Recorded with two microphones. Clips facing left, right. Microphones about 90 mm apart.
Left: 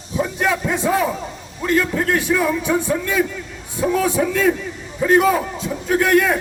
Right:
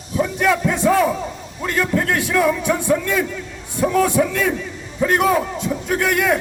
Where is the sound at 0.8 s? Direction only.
5° left (ahead or behind).